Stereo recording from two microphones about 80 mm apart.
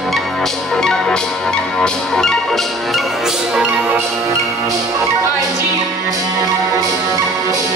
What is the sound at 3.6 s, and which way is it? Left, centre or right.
Music, centre.